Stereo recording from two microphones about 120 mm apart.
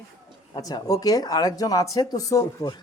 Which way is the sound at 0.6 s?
30° left (ahead or behind).